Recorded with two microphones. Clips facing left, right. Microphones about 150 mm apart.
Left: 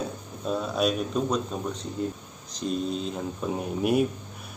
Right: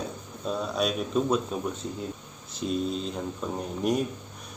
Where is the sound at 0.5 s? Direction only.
Centre (ahead or behind).